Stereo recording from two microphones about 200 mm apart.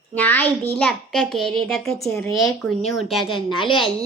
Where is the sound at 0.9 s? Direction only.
5° left (ahead or behind).